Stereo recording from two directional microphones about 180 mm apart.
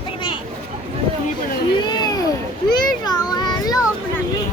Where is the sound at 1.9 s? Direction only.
25° left (ahead or behind).